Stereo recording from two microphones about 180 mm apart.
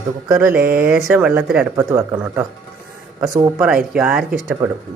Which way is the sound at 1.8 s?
20° right (ahead or behind).